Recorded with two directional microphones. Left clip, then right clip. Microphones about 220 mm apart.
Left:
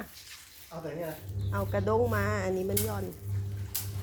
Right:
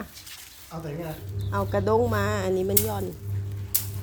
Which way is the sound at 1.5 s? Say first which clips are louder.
Right 5 dB; 15° right (ahead or behind).